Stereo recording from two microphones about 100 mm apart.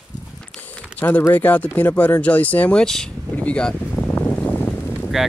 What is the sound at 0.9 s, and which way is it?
Speech, 15° left (ahead or behind).